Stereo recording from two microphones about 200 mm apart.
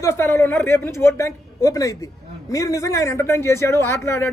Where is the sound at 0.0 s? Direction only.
15° left (ahead or behind).